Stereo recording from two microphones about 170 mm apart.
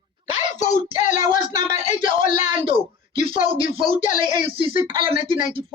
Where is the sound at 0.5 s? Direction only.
45° left (ahead or behind).